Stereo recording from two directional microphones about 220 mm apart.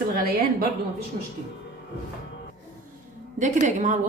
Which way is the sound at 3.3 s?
35° right (ahead or behind).